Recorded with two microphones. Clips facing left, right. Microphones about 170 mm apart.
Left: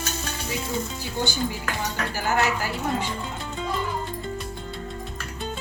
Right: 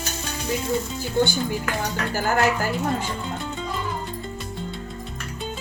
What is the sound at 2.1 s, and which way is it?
Speech, 50° right (ahead or behind).